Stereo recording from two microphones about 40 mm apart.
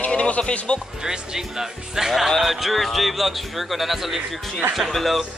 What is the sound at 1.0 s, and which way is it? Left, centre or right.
Speech, centre.